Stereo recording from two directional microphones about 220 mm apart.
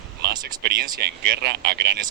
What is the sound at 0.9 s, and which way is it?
Speech, 45° right (ahead or behind).